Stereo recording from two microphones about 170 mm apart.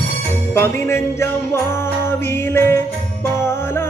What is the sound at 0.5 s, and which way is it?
Music, 15° left (ahead or behind).